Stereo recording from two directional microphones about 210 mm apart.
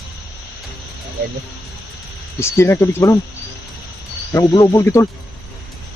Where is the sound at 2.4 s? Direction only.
10° left (ahead or behind).